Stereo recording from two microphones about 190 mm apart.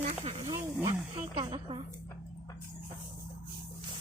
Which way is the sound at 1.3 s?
25° right (ahead or behind).